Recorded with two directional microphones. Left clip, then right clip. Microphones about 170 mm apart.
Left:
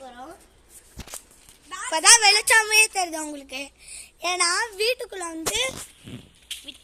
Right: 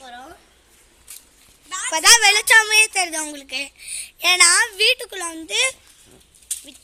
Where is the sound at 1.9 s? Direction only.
5° left (ahead or behind).